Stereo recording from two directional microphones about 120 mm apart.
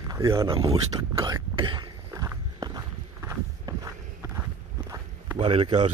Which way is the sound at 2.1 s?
30° right (ahead or behind).